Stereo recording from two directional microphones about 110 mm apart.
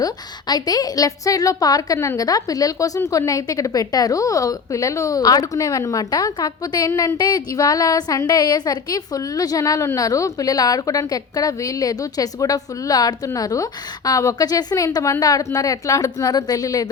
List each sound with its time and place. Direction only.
0.0 s a woman's voice: 35° left (ahead or behind)